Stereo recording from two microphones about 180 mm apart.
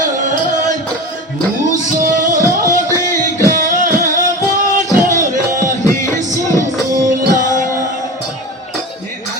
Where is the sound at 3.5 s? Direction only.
45° right (ahead or behind).